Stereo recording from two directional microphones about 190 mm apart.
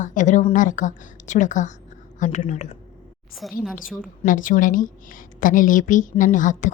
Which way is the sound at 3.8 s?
45° left (ahead or behind).